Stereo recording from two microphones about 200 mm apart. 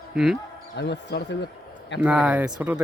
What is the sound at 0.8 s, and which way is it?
Speech, 60° left (ahead or behind).